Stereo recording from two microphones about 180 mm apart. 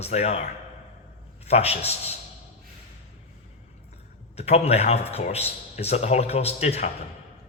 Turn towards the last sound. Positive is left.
turn(degrees=35)  # may be behind; listen again after turning